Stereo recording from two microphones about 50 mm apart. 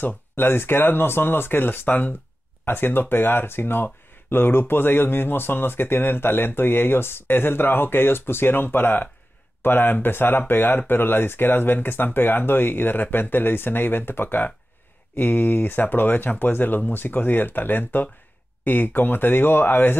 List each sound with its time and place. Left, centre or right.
0.0 s speech: left